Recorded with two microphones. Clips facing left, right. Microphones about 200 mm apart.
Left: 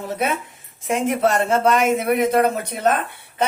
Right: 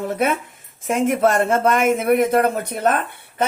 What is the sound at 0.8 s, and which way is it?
Speech, 50° right (ahead or behind).